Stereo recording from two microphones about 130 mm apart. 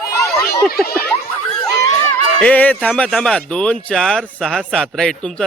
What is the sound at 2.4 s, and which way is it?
A man's voice, 10° left (ahead or behind).